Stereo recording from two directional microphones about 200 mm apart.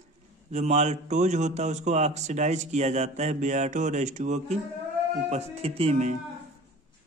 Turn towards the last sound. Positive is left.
turn(degrees=-35)  # may be behind; listen again after turning